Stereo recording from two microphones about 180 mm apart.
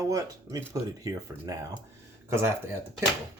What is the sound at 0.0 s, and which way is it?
Speech, 15° right (ahead or behind).